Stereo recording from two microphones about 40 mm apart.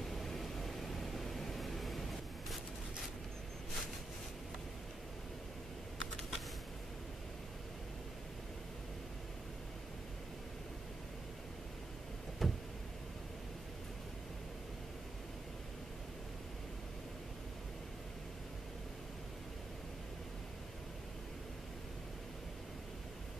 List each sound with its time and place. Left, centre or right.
0.0 s vehicle: centre
12.4 s vehicle: centre